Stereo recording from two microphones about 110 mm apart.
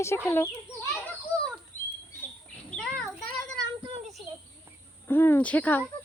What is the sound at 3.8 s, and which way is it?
Child singing, 65° right (ahead or behind).